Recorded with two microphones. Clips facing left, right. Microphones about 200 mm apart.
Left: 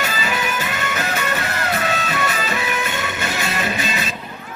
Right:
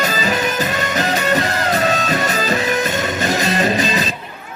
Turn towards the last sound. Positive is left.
turn(degrees=-35)  # may be behind; listen again after turning